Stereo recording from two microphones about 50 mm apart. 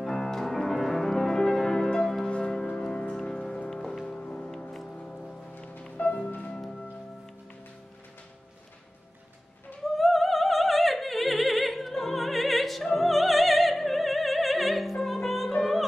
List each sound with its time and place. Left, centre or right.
0.0 s music: centre
1.9 s church bell: centre
2.3 s music: left
4.5 s music: centre
5.6 s music: left
9.9 s opera: centre